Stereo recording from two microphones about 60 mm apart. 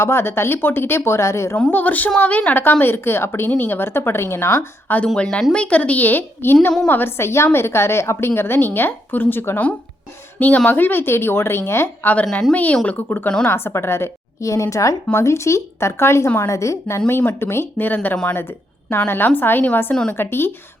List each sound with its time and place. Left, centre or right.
0.0 s a woman's voice: left
1.7 s a woman's voice: left
5.0 s a woman's voice: centre; by 9.6 s left
10.7 s speech: left
12.2 s speech: centre
12.7 s a woman's voice: left
13.4 s a woman's voice: left
17.1 s speech: left
19.9 s speech: centre
20.1 s speech: left